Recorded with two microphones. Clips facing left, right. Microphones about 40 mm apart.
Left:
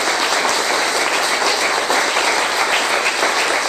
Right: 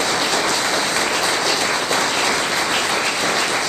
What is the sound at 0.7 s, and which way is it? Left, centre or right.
Applause, centre.